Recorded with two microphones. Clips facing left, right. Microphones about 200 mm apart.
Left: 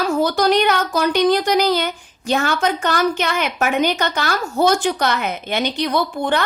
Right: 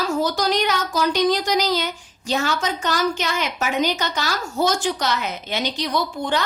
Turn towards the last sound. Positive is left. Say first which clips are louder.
# left 3 dB
turn(degrees=60)  # may be behind; listen again after turning